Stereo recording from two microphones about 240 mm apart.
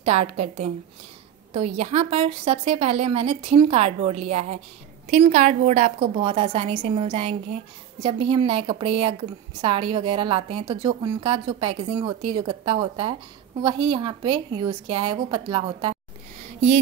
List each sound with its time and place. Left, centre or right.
0.0 s a woman's voice: right